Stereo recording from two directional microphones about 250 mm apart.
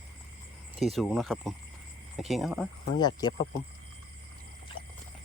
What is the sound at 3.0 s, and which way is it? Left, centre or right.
Speech, centre.